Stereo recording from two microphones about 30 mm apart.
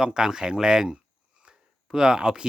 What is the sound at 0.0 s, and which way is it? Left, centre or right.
Speech, right.